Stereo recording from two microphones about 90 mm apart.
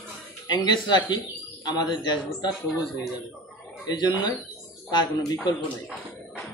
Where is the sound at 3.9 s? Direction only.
50° left (ahead or behind).